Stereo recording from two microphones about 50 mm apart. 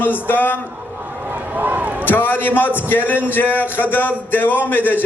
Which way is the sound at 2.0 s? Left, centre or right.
Left.